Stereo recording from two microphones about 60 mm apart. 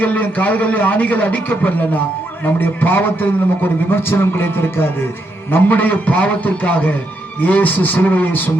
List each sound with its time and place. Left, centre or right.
0.0 s a man's voice: left